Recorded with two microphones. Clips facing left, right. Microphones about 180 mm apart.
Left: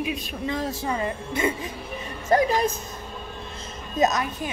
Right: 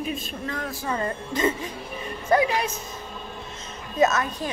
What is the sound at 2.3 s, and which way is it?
Speech, 40° left (ahead or behind).